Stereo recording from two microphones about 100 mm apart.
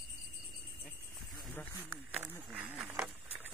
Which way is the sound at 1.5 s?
20° left (ahead or behind).